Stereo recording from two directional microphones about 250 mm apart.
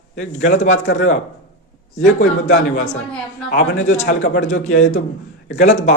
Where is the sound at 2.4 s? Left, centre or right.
Left.